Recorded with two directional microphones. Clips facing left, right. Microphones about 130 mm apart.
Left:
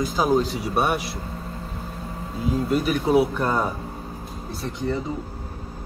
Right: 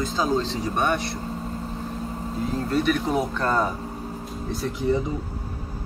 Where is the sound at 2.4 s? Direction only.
10° left (ahead or behind).